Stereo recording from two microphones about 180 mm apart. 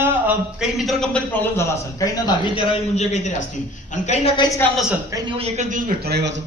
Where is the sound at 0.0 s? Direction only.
10° right (ahead or behind); by 2.6 s 25° left (ahead or behind).